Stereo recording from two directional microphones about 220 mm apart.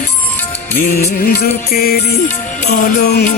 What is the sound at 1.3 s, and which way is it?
Music, 40° left (ahead or behind).